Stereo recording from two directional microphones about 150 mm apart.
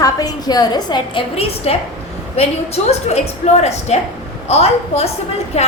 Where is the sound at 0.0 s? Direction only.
25° left (ahead or behind).